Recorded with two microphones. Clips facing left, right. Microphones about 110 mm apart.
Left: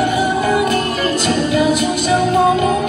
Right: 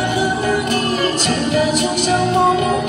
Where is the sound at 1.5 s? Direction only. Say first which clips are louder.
Left 1 dB; 30° right (ahead or behind).